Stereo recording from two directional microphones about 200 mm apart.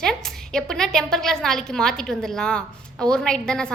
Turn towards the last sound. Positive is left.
turn(degrees=5)  # may be behind; listen again after turning